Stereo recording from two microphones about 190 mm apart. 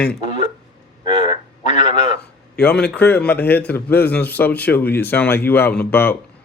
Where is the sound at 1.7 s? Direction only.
40° left (ahead or behind).